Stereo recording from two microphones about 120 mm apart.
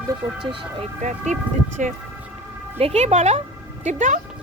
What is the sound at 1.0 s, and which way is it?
Speech, 80° right.